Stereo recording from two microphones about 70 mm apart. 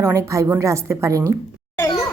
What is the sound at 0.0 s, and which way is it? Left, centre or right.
A woman's voice, right.